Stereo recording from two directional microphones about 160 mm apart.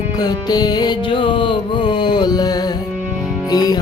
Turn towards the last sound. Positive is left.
turn(degrees=25)  # may be behind; listen again after turning